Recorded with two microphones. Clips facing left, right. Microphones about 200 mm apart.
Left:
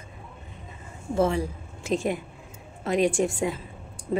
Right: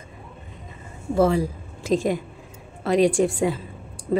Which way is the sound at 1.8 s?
90° right.